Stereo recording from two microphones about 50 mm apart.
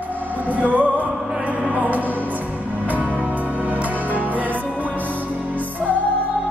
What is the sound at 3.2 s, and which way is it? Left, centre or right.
Music, right.